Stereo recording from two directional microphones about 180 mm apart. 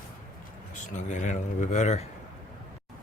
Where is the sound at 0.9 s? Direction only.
45° left (ahead or behind).